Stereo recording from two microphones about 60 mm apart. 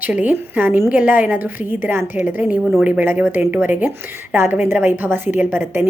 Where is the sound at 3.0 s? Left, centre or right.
Right.